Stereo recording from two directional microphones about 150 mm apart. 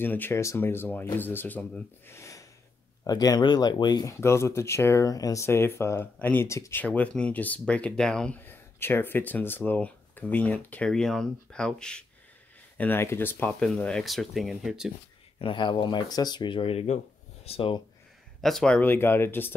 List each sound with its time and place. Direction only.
0.0 s speech: 15° left (ahead or behind)
8.5 s speech: 15° left (ahead or behind); by 14.9 s 5° right (ahead or behind)
15.3 s speech: 35° left (ahead or behind)
18.4 s speech: 5° left (ahead or behind)